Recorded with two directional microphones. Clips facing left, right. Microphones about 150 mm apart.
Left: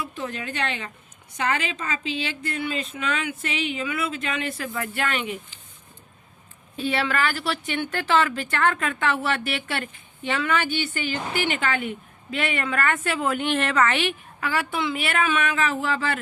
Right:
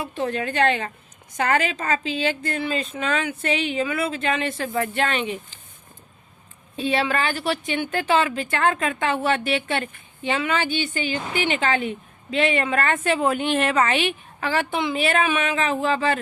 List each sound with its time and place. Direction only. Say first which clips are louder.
0.0 s a woman's voice: right 6 dB; 40° right (ahead or behind)
2.0 s speech: right 5 dB; 35° right (ahead or behind)
6.7 s a woman's voice: right 2 dB; 15° right (ahead or behind)
14.4 s speech: right 2 dB; 25° right (ahead or behind)